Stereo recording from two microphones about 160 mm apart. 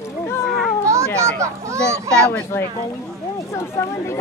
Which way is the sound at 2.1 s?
5° left (ahead or behind).